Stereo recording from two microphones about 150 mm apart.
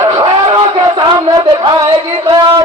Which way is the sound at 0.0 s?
25° right (ahead or behind).